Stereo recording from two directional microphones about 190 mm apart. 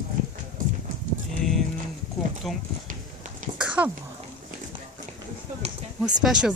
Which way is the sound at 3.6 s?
5° right (ahead or behind).